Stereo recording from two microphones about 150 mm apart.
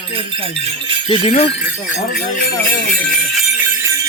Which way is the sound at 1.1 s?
40° left (ahead or behind).